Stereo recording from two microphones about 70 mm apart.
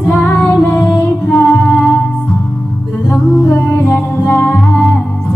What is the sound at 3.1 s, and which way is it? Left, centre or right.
Music, left.